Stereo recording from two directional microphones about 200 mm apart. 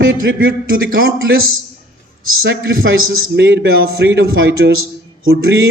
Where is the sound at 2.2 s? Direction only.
85° right.